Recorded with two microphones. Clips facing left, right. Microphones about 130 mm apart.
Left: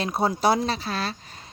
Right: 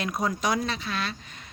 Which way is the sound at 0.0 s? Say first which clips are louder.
Left 5 dB; 30° left (ahead or behind).